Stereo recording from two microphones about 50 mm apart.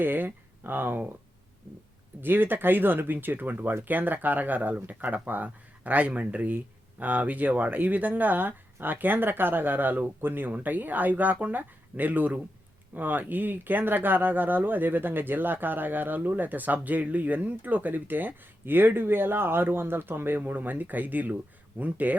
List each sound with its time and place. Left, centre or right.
0.0 s speech: right
2.2 s speech: right